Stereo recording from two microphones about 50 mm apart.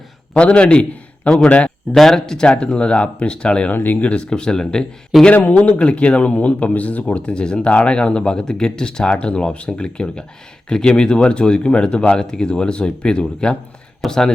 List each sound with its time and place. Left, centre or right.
0.3 s a man's voice: left
2.0 s speech: centre
3.7 s speech: left
4.0 s speech: left
5.1 s speech: centre
5.5 s speech: left
14.0 s speech: centre